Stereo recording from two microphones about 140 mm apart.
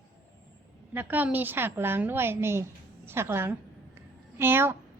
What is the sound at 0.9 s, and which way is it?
A woman's voice, 15° right (ahead or behind).